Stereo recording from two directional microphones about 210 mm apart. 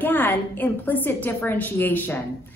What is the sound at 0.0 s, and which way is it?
A woman's voice, 10° left (ahead or behind).